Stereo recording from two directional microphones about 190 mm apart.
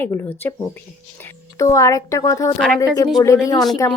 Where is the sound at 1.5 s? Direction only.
15° left (ahead or behind).